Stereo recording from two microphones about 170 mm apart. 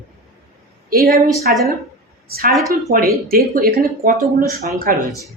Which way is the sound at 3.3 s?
60° right (ahead or behind).